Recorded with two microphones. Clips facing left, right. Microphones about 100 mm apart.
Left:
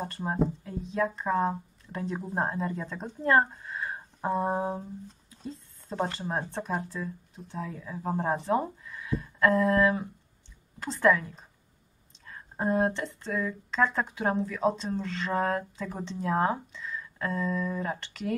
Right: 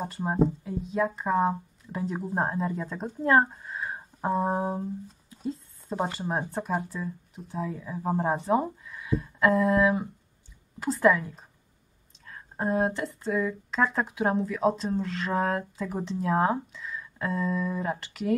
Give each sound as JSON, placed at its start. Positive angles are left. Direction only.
{"t": 0.4, "sound": "speech", "side_deg": -5}